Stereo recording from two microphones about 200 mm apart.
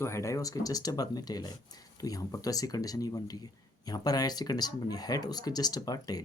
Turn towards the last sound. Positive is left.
turn(degrees=20)  # may be behind; listen again after turning